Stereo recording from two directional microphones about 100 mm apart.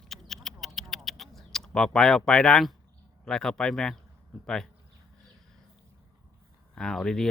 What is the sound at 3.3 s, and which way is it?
Speech, 5° left (ahead or behind).